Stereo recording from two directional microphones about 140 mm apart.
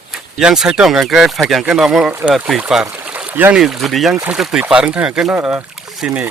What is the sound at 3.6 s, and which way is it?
Speech, centre (ahead or behind).